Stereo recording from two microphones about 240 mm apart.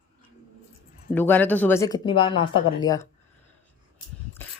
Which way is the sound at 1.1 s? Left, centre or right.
Centre.